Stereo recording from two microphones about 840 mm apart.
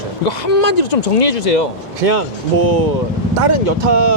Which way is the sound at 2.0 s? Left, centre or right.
Right.